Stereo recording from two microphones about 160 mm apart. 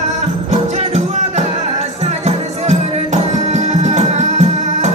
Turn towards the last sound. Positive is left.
turn(degrees=-45)  # may be behind; listen again after turning